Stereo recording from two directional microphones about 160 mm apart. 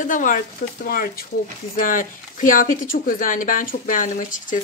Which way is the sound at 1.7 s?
55° left (ahead or behind).